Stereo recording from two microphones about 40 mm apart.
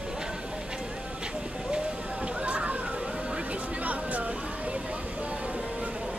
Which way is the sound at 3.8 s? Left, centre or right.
Right.